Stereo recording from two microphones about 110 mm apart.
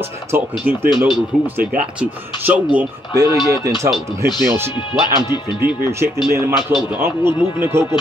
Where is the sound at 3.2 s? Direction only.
40° left (ahead or behind).